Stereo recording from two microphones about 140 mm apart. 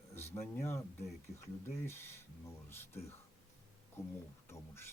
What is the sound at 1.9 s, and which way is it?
Speech, 15° left (ahead or behind).